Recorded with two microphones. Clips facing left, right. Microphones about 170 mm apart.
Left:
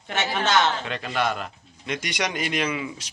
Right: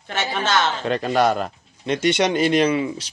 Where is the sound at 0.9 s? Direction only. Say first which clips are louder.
Right 8 dB; 40° right (ahead or behind).